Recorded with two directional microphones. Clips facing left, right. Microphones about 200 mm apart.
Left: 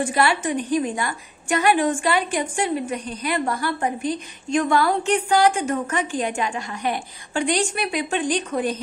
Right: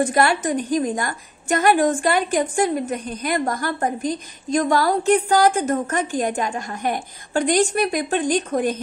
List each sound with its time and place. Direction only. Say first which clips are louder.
0.0 s a woman's voice: right 2 dB; 40° right (ahead or behind)